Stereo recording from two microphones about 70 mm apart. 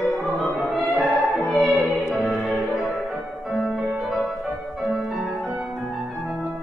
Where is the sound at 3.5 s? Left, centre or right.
Centre.